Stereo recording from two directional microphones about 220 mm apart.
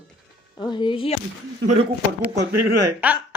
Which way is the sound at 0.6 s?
20° left (ahead or behind).